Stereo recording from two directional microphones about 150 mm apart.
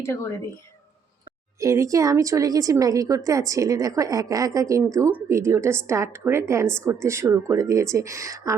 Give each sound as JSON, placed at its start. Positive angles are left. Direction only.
{"t": 0.0, "sound": "speech", "side_deg": 20}
{"t": 1.5, "sound": "speech", "side_deg": -20}